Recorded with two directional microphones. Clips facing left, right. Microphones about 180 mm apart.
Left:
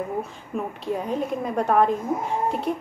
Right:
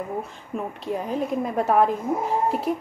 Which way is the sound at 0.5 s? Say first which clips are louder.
Left 1 dB; centre (ahead or behind).